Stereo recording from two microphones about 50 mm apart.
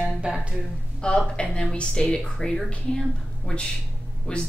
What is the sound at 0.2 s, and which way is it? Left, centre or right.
Speech, right.